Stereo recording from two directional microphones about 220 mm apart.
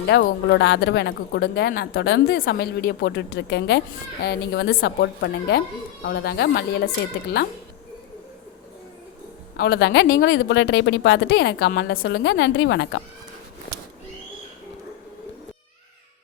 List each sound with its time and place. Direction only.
0.1 s speech: 50° left (ahead or behind)
9.6 s speech: 45° left (ahead or behind)